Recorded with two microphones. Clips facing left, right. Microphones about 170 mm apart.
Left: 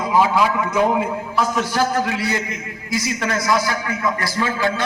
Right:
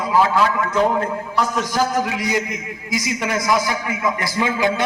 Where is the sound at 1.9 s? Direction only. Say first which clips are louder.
Right 1 dB; 15° right (ahead or behind).